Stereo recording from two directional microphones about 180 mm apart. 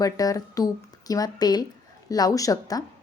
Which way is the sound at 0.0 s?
20° left (ahead or behind).